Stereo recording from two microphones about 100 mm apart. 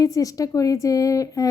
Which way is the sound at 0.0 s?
35° left (ahead or behind).